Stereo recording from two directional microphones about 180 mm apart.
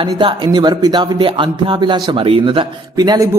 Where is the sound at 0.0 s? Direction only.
25° right (ahead or behind).